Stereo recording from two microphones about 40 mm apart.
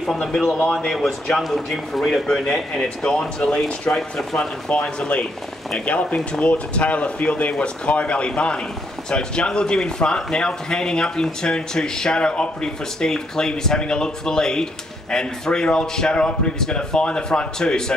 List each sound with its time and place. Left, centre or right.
0.0 s speech: centre; by 3.9 s left
3.9 s speech: centre
4.4 s speech: left
16.5 s speech: centre